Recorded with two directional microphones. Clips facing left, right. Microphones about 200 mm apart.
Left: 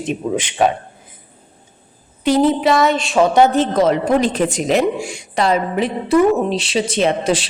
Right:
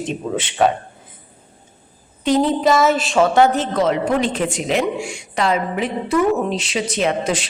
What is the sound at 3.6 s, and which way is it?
A woman's voice, 40° left (ahead or behind).